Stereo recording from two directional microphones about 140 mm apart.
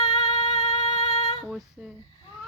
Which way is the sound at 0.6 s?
50° left (ahead or behind).